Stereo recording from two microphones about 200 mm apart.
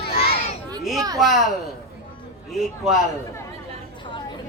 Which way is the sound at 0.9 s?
20° right (ahead or behind).